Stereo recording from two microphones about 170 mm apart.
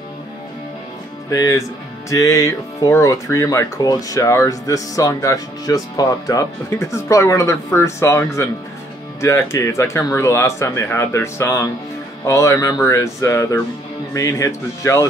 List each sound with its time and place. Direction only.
1.3 s speech: 20° left (ahead or behind)